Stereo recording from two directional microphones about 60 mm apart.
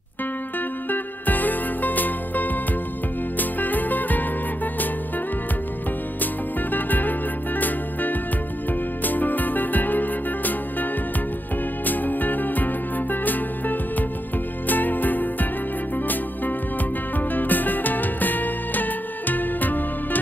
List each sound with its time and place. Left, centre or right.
0.8 s music: left
6.7 s music: left
17.2 s music: left